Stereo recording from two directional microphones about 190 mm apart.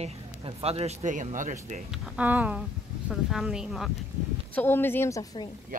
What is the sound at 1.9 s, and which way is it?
Speech, 5° right (ahead or behind).